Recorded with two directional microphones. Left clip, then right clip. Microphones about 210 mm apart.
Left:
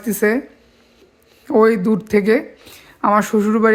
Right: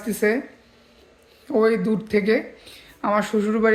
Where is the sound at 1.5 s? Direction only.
40° left (ahead or behind).